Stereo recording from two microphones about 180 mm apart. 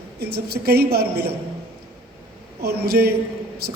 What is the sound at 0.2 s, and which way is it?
A man's voice, 65° right (ahead or behind).